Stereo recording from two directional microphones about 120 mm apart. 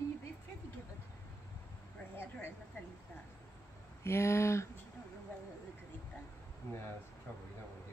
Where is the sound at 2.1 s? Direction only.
20° left (ahead or behind).